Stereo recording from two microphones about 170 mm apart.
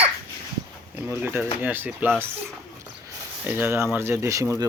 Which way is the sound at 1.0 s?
10° right (ahead or behind).